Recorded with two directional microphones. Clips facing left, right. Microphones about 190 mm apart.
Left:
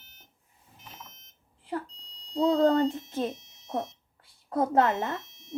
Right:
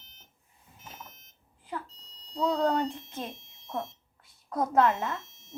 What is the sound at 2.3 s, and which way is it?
Speech, 30° left (ahead or behind).